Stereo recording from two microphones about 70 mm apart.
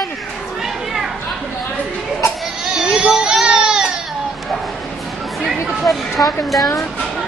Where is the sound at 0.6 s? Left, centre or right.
Centre.